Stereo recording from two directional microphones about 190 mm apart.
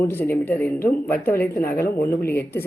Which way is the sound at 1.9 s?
55° left (ahead or behind).